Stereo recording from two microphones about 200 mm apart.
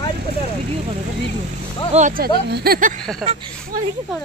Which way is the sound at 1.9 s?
40° right (ahead or behind).